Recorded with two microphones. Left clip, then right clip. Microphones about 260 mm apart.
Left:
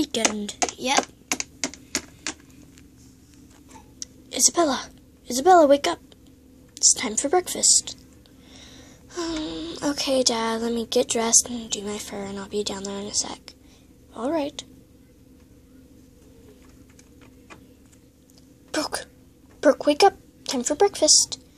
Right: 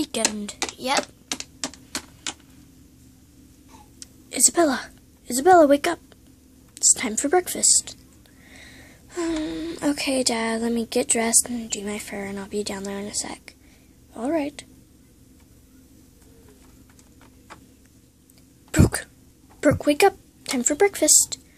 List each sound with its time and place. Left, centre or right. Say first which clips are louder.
0.0 s a child's voice: left 2 dB; centre
4.0 s a child's voice: left 1 dB; centre
18.7 s cough: right 4 dB; centre
19.6 s a child's voice: left 1 dB; centre